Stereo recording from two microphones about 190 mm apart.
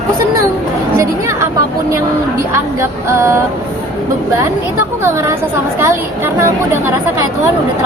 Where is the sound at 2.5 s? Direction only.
15° right (ahead or behind).